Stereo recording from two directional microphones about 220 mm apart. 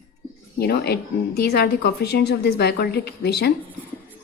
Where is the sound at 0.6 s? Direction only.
45° left (ahead or behind).